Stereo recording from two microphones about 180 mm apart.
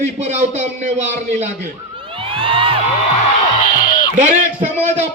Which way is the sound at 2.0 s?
30° right (ahead or behind).